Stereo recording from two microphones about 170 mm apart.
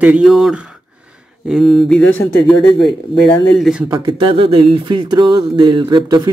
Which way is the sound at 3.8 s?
20° right (ahead or behind).